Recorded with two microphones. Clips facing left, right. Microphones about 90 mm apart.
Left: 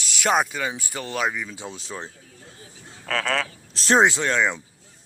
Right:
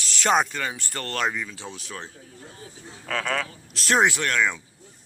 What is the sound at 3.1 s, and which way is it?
Speech, 90° left.